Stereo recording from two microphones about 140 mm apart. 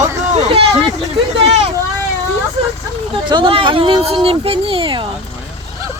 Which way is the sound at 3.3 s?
35° right (ahead or behind).